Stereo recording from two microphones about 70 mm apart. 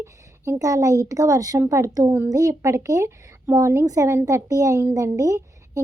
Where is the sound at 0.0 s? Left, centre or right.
Right.